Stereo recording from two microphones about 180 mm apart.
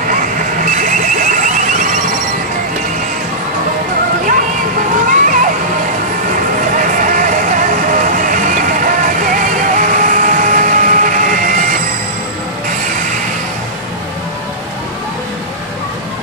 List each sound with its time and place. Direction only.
0.8 s alarm: 45° right (ahead or behind)
4.3 s music: 50° right (ahead or behind)
6.8 s music: 45° right (ahead or behind)